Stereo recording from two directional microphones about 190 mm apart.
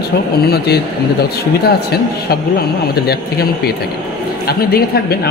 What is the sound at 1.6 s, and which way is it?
A man's voice, 55° left (ahead or behind).